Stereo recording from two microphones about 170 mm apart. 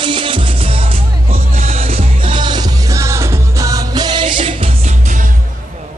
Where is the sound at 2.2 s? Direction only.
30° right (ahead or behind); by 5.3 s 50° right (ahead or behind).